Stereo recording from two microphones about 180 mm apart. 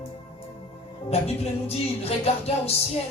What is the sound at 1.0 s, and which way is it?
Music, 35° left (ahead or behind).